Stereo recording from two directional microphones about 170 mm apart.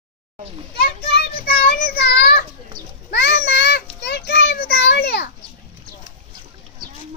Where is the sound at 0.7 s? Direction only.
65° left (ahead or behind).